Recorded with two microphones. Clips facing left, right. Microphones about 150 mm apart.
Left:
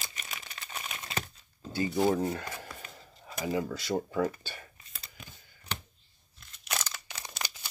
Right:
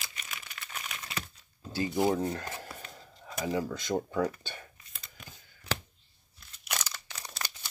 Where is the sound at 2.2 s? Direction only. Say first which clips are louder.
Left 1 dB; 10° left (ahead or behind).